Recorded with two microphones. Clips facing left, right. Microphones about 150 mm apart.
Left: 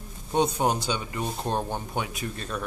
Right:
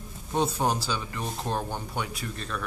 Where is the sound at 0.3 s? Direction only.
20° left (ahead or behind).